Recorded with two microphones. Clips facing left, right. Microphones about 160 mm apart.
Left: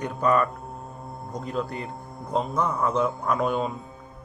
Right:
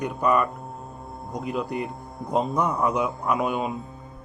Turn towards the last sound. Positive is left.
turn(degrees=-5)  # may be behind; listen again after turning